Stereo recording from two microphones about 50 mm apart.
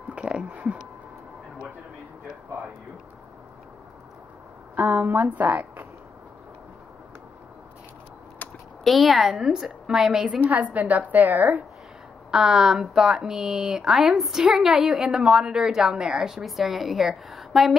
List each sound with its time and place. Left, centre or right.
0.2 s speech: centre
4.7 s speech: right
5.0 s speech: right
5.3 s speech: right
8.4 s a sound: left
8.8 s a woman's voice: centre
10.2 s a woman's voice: right
12.3 s a woman's voice: centre